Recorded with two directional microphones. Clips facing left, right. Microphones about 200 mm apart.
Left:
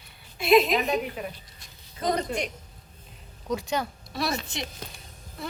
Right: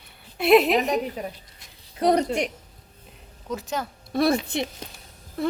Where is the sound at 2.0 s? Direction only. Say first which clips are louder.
Right 7 dB; 70° right (ahead or behind).